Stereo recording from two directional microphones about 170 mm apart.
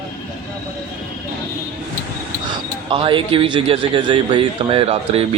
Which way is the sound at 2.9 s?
30° right (ahead or behind).